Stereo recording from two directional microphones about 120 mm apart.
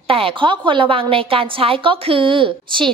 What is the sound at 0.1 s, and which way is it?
A woman's voice, 50° right (ahead or behind).